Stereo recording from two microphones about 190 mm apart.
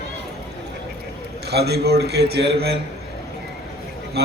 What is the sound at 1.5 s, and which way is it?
A man's voice, 60° right (ahead or behind).